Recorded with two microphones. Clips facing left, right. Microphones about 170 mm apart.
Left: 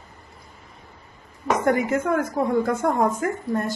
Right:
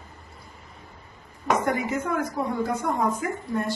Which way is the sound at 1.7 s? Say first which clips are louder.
Left 5 dB; 50° left (ahead or behind).